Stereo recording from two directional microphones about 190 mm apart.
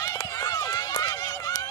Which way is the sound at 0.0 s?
15° left (ahead or behind).